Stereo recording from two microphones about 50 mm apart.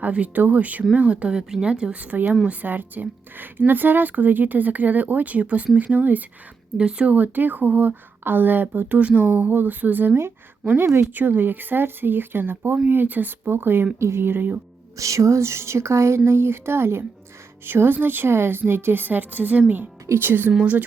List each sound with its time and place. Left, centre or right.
0.0 s speech: right
1.0 s speech: right
6.7 s a woman's voice: right
14.0 s a woman's voice: right
14.9 s speech: right
17.7 s a woman's voice: right